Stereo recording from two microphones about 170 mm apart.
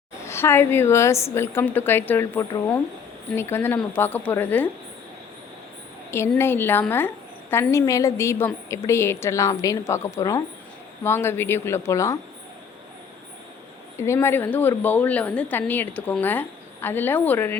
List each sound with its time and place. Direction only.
0.3 s a woman's voice: 15° left (ahead or behind)
6.1 s a woman's voice: 15° left (ahead or behind)
13.9 s a woman's voice: 15° left (ahead or behind)